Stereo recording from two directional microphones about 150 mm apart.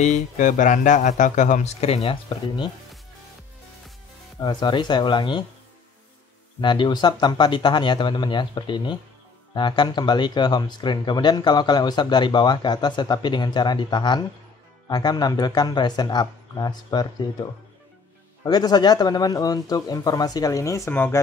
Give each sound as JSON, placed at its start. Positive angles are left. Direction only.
{"t": 0.0, "sound": "speech", "side_deg": 55}
{"t": 4.4, "sound": "speech", "side_deg": 30}
{"t": 6.6, "sound": "speech", "side_deg": 30}